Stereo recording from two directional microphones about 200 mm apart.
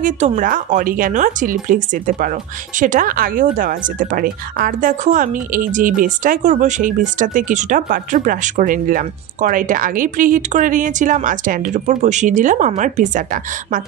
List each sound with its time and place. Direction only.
0.0 s speech: 40° right (ahead or behind)